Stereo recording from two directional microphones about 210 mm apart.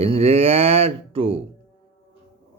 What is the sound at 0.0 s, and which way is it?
Speech, 30° right (ahead or behind).